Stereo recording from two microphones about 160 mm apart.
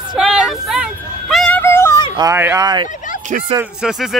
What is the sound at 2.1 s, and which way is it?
Speech, 20° right (ahead or behind).